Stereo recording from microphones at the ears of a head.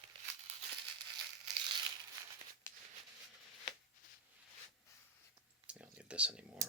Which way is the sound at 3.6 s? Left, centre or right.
Left.